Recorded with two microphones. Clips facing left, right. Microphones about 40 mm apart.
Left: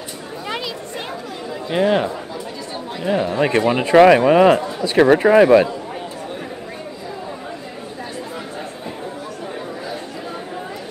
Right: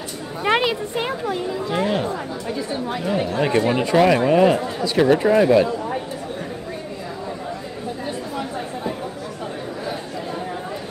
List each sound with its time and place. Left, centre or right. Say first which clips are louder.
0.5 s a sound: right 9 dB; right
1.5 s speech: left 7 dB; left
3.3 s speech: left 1 dB; left